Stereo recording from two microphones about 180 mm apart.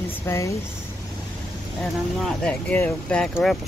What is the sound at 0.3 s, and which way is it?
Speech, 15° left (ahead or behind).